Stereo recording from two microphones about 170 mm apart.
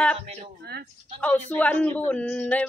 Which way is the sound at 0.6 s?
65° right (ahead or behind).